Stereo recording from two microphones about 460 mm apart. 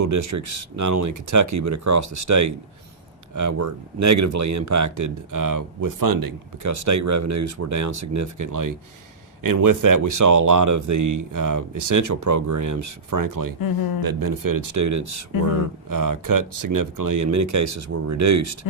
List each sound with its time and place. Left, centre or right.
0.0 s speech: right
15.3 s speech: left
15.9 s speech: right
18.6 s speech: left